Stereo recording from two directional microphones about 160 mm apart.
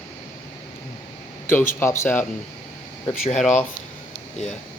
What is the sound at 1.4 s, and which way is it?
Speech, 15° left (ahead or behind).